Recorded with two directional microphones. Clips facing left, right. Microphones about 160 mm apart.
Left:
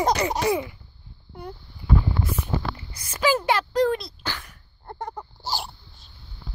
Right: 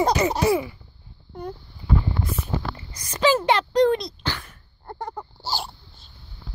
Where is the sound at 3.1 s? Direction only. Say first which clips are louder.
Right 3 dB; 10° left (ahead or behind).